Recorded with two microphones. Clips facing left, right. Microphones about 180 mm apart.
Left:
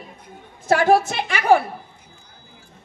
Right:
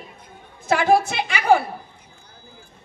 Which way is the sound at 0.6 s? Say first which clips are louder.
Left 2 dB; 40° left (ahead or behind).